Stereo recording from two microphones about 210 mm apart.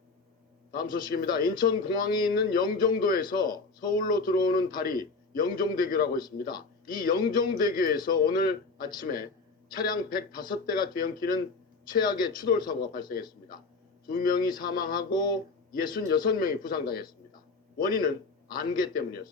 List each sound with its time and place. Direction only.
0.7 s a man's voice: 45° left (ahead or behind)
9.7 s a man's voice: 45° left (ahead or behind)
12.5 s speech: 20° left (ahead or behind)
12.9 s a man's voice: 45° left (ahead or behind)
15.1 s speech: 20° left (ahead or behind)
15.8 s a man's voice: 40° left (ahead or behind)